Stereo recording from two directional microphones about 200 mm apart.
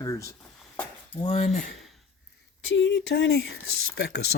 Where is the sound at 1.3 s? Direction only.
45° left (ahead or behind).